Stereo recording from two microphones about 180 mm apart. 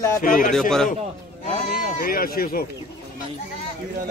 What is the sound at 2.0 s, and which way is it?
Speech, 55° left (ahead or behind).